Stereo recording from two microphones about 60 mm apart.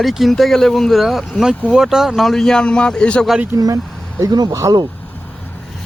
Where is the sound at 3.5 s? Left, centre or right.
Right.